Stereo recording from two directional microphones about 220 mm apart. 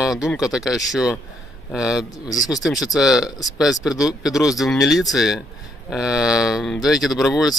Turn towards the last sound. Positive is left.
turn(degrees=0)  # may be behind; listen again after turning